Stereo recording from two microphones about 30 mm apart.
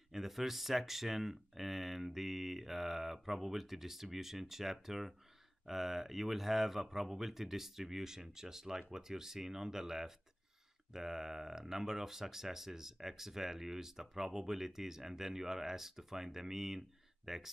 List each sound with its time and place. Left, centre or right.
0.1 s speech: centre